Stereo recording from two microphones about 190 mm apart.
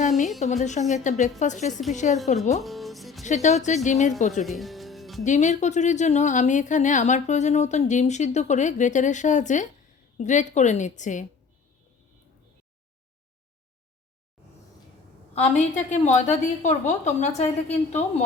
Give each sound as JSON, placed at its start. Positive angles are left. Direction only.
{"t": 0.3, "sound": "a woman's voice", "side_deg": 40}
{"t": 2.6, "sound": "music", "side_deg": 0}
{"t": 3.2, "sound": "a woman's voice", "side_deg": 40}
{"t": 4.4, "sound": "music", "side_deg": 0}
{"t": 5.2, "sound": "a woman's voice", "side_deg": 40}
{"t": 15.4, "sound": "a woman's voice", "side_deg": 40}